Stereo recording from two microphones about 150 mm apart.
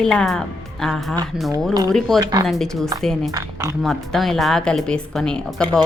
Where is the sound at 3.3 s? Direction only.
20° right (ahead or behind).